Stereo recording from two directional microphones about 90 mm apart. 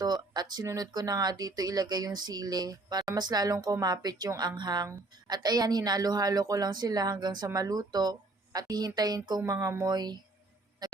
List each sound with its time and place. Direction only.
0.0 s speech: 50° right (ahead or behind)
9.5 s speech: 35° right (ahead or behind)
9.8 s speech: 50° right (ahead or behind)